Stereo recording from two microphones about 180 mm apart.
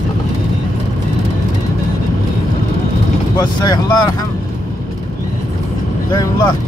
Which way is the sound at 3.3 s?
25° left (ahead or behind).